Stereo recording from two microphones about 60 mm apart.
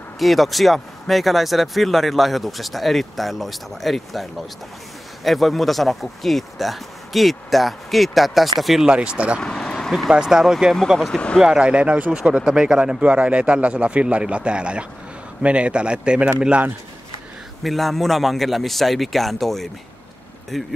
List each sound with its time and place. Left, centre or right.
0.2 s speech: centre
8.8 s speech: centre
9.4 s vehicle: centre
10.0 s speech: centre
11.4 s speech: centre
17.6 s speech: centre